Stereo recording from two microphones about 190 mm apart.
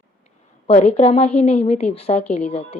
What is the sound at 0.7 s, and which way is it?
A woman's voice, 35° left (ahead or behind).